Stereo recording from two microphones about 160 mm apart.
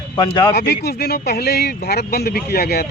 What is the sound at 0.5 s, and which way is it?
Speech, 90° left.